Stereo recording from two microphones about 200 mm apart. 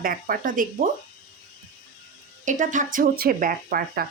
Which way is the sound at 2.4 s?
40° right (ahead or behind).